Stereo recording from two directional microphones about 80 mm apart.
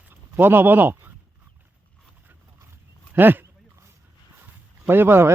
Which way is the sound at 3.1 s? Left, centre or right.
Right.